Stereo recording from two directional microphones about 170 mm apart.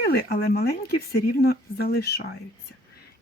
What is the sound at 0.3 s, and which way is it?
A woman's voice, 65° left (ahead or behind).